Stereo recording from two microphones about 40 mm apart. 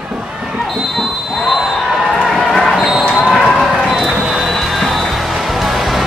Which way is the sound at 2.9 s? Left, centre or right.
Centre.